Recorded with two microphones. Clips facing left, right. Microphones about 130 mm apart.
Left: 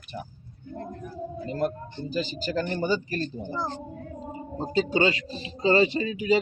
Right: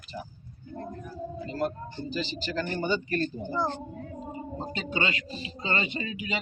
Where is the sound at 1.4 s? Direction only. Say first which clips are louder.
Left 3 dB; 50° left (ahead or behind).